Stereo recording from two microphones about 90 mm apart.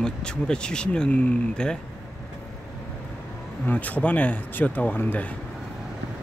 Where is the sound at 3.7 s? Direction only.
20° left (ahead or behind).